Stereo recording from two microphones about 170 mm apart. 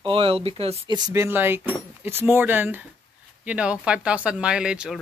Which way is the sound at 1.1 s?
15° right (ahead or behind).